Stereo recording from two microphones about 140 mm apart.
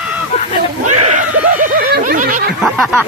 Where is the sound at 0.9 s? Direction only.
55° right (ahead or behind); by 2.4 s 75° right (ahead or behind).